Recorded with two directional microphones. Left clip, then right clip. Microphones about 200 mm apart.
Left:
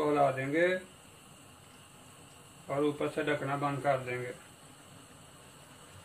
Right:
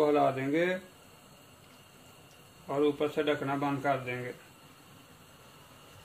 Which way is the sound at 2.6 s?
35° right (ahead or behind).